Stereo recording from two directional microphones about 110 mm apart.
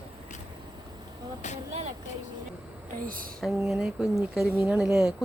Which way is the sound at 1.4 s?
90° left.